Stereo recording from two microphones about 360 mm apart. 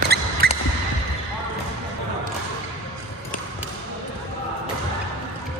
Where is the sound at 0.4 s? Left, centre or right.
Right.